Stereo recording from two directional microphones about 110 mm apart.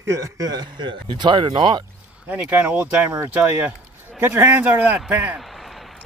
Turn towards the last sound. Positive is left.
turn(degrees=-15)  # may be behind; listen again after turning